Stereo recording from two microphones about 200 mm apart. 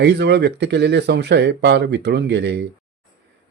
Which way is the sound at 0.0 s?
60° right (ahead or behind).